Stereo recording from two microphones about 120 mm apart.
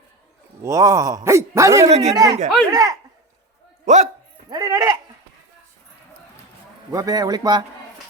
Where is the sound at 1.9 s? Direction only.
65° right (ahead or behind).